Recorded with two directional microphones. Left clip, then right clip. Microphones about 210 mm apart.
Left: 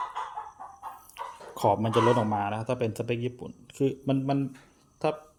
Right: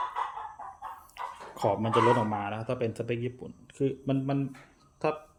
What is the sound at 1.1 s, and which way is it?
Speech, 20° left (ahead or behind).